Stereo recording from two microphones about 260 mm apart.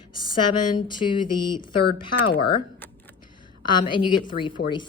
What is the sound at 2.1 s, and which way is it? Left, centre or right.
Speech, left.